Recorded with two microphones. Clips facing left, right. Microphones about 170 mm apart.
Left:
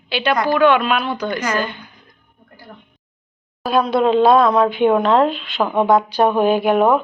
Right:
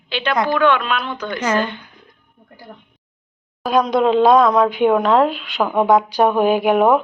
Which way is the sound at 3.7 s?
15° right (ahead or behind).